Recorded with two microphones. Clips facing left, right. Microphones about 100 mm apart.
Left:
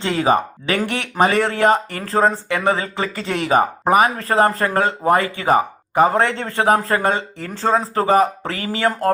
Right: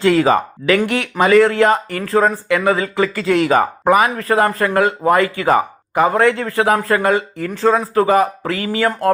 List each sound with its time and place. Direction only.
0.0 s speech: 25° left (ahead or behind)